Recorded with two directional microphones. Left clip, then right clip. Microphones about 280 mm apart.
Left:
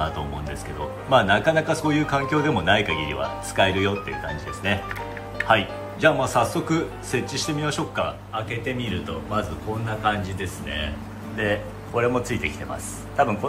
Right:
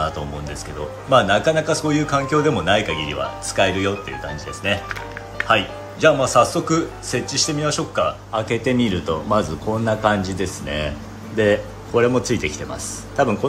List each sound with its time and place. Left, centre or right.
1.1 s a man's voice: centre
8.5 s a man's voice: right